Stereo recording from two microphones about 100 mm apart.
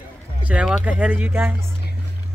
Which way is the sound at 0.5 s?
15° right (ahead or behind).